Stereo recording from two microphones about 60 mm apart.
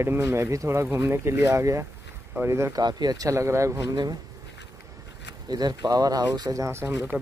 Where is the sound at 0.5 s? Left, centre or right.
Right.